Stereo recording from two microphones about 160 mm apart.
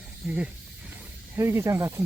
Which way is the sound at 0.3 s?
5° right (ahead or behind).